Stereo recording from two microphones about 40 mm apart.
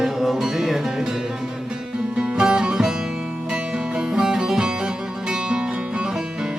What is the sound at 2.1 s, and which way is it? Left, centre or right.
Music, right.